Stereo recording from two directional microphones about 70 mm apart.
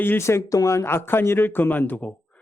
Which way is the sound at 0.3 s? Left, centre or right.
Left.